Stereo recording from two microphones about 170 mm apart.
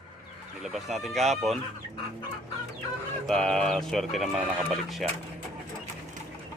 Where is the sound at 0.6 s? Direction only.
Centre (ahead or behind).